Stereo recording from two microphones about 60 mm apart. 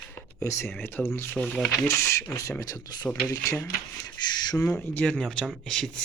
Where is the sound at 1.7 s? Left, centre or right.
Left.